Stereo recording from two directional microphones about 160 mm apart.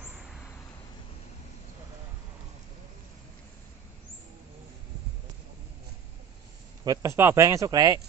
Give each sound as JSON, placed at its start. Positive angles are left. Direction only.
{"t": 0.0, "sound": "vehicle", "side_deg": -5}
{"t": 6.8, "sound": "speech", "side_deg": -20}